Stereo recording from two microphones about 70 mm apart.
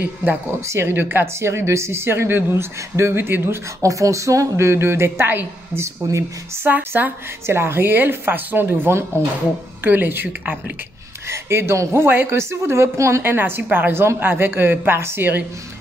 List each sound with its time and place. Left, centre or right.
0.7 s a woman's voice: right
3.8 s a woman's voice: right
11.2 s a woman's voice: right
13.2 s a woman's voice: right